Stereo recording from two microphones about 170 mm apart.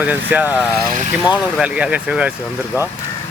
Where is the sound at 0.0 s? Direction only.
10° right (ahead or behind).